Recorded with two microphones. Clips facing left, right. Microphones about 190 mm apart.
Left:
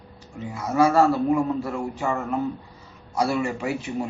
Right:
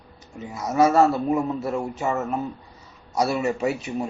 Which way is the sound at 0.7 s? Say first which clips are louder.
Right 1 dB; 25° right (ahead or behind).